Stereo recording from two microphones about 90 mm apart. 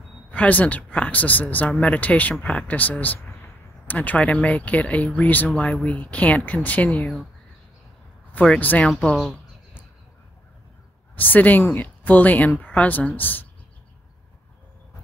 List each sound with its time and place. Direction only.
0.3 s speech: 15° left (ahead or behind)
2.3 s speech: 5° left (ahead or behind)
2.7 s a woman's voice: 20° left (ahead or behind)
8.3 s speech: 15° left (ahead or behind)
8.8 s speech: 5° left (ahead or behind)
11.1 s a woman's voice: 20° left (ahead or behind)